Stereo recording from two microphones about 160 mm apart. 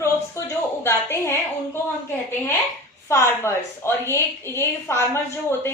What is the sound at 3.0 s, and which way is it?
A woman's voice, 15° left (ahead or behind).